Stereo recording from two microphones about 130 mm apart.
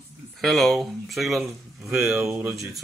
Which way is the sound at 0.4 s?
Centre (ahead or behind).